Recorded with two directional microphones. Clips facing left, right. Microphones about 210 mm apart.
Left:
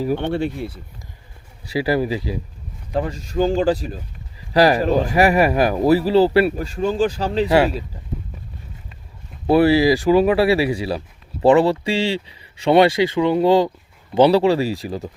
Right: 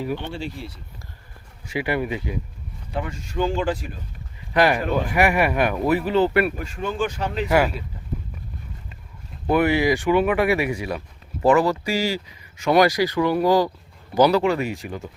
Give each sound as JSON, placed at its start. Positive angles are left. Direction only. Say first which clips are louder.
{"t": 0.2, "sound": "speech", "louder": "left 9 dB", "side_deg": 60}
{"t": 1.7, "sound": "speech", "louder": "left 5 dB", "side_deg": 35}
{"t": 9.5, "sound": "speech", "louder": "left 5 dB", "side_deg": 35}